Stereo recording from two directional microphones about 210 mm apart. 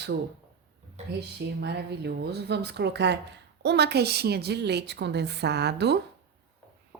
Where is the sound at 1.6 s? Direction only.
50° right (ahead or behind).